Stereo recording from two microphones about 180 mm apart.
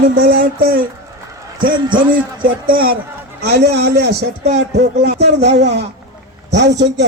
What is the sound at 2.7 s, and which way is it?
A man's voice, 55° right (ahead or behind).